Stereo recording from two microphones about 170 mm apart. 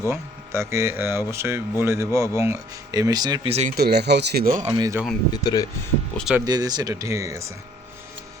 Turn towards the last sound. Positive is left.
turn(degrees=-20)  # may be behind; listen again after turning